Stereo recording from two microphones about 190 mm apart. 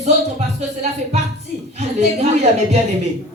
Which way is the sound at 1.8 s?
35° right (ahead or behind).